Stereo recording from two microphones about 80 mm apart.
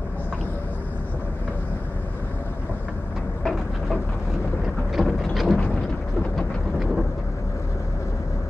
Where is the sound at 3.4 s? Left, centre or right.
Centre.